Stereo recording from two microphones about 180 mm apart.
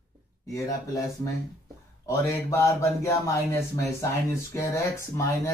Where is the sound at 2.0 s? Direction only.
15° left (ahead or behind).